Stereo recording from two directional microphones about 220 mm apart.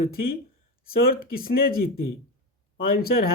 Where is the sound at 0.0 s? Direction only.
40° left (ahead or behind).